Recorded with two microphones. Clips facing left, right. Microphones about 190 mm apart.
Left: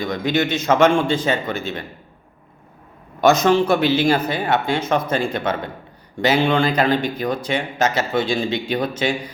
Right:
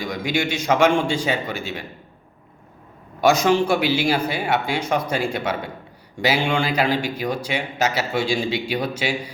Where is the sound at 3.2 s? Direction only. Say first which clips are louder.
Left 2 dB; 10° right (ahead or behind).